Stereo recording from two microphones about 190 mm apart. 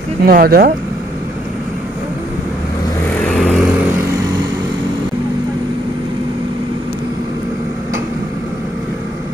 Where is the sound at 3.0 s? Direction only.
5° left (ahead or behind).